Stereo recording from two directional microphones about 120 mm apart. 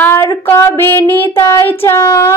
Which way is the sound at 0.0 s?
20° left (ahead or behind).